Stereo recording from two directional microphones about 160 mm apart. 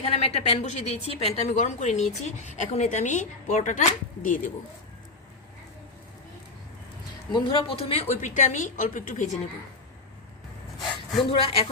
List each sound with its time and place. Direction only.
0.0 s a woman's voice: 40° left (ahead or behind)
7.3 s a woman's voice: 35° left (ahead or behind); by 9.4 s 50° left (ahead or behind)
11.3 s a woman's voice: 35° left (ahead or behind)